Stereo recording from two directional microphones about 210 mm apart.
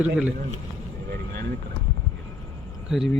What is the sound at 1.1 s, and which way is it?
Vehicle, 45° right (ahead or behind).